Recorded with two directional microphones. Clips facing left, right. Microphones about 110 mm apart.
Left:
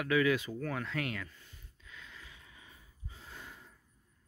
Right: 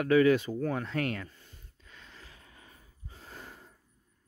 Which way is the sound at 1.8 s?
40° right (ahead or behind).